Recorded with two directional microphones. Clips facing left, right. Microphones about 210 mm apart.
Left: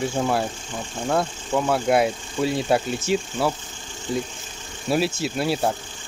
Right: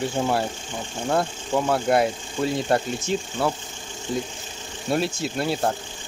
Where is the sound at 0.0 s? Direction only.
Centre (ahead or behind).